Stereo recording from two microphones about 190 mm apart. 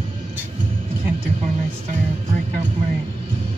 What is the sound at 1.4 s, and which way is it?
Music, 35° right (ahead or behind).